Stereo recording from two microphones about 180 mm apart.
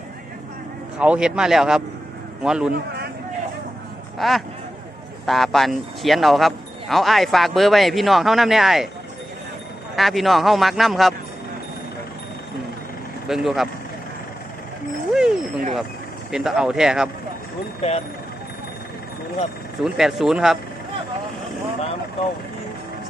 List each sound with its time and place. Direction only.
0.9 s speech: 5° right (ahead or behind)
2.7 s a man's voice: 60° right (ahead or behind)
4.2 s speech: centre (ahead or behind)
9.9 s speech: centre (ahead or behind)
13.2 s speech: centre (ahead or behind)
15.1 s a sound: 5° right (ahead or behind)
16.3 s speech: centre (ahead or behind)
17.8 s speech: 35° left (ahead or behind)
19.8 s speech: centre (ahead or behind)